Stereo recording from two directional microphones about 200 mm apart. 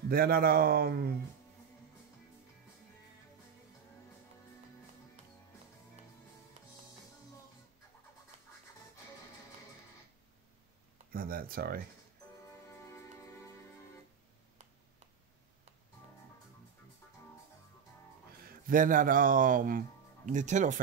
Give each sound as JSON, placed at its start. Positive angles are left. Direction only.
{"t": 0.1, "sound": "speech", "side_deg": -50}
{"t": 11.1, "sound": "speech", "side_deg": -45}
{"t": 12.9, "sound": "music", "side_deg": 15}
{"t": 18.7, "sound": "speech", "side_deg": -40}